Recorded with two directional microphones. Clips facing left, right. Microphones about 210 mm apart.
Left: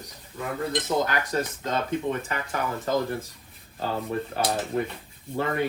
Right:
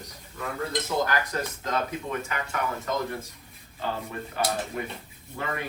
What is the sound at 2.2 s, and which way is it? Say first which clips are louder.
Speech: left 1 dB; 30° left (ahead or behind).